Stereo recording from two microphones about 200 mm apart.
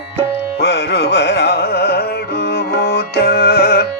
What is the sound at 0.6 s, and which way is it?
Carnatic music, 55° left (ahead or behind).